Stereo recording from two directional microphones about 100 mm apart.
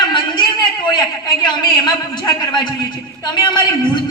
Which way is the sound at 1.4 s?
45° left (ahead or behind).